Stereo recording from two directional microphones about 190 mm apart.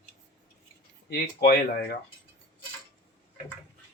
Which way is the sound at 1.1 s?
55° left (ahead or behind).